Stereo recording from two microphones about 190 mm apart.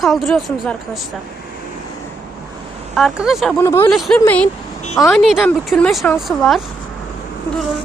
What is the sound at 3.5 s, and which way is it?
Speech, 15° left (ahead or behind).